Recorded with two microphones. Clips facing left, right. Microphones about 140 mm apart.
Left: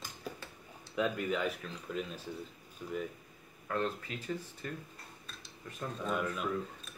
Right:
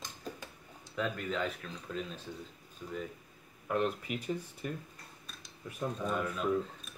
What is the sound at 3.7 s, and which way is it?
Speech, 15° right (ahead or behind).